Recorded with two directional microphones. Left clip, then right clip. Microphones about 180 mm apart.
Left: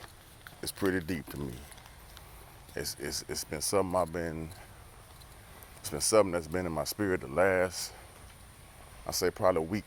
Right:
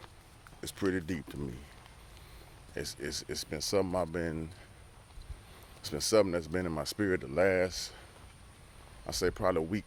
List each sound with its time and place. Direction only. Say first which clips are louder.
0.6 s speech: left 2 dB; 10° right (ahead or behind)
2.7 s speech: left 1 dB; 20° right (ahead or behind)
5.8 s speech: left 2 dB; 20° right (ahead or behind)
9.0 s speech: left 3 dB; 20° right (ahead or behind)